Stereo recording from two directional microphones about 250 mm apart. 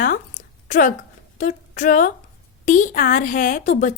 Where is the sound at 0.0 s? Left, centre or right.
Left.